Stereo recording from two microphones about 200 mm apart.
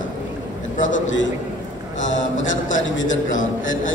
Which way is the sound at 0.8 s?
70° left (ahead or behind).